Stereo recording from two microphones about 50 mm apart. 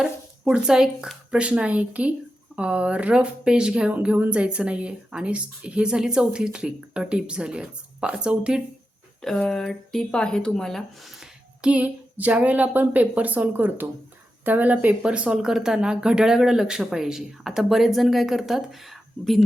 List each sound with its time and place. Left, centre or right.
0.4 s a woman's voice: centre
9.5 s a woman's voice: centre
11.6 s a sound: right
15.0 s a woman's voice: right
15.4 s speech: centre